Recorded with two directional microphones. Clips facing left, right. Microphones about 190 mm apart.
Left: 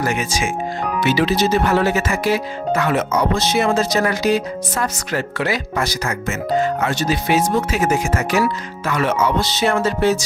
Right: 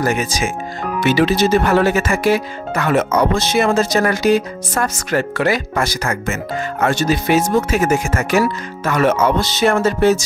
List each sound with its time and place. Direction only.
0.0 s speech: 40° right (ahead or behind)
1.0 s speech: 50° right (ahead or behind)